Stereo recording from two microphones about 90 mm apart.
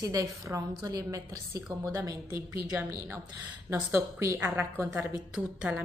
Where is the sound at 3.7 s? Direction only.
30° right (ahead or behind).